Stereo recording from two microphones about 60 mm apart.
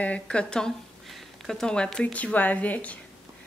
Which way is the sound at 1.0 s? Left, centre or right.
Centre.